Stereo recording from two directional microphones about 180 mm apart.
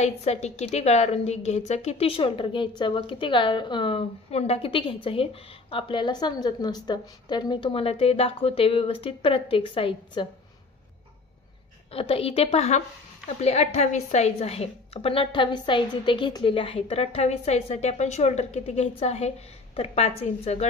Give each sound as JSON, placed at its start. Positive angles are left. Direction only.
{"t": 0.0, "sound": "a woman's voice", "side_deg": 35}
{"t": 11.9, "sound": "a woman's voice", "side_deg": 30}